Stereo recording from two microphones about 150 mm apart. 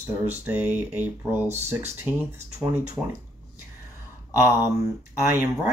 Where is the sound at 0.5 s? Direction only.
10° right (ahead or behind).